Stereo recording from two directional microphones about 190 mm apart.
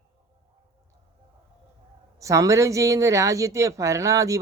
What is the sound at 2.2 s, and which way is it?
Speech, 15° right (ahead or behind).